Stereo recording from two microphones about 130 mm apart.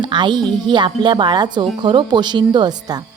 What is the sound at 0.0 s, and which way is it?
A woman's voice, 35° right (ahead or behind).